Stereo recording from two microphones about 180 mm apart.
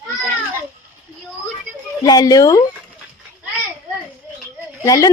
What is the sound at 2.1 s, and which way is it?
Speech, 20° left (ahead or behind).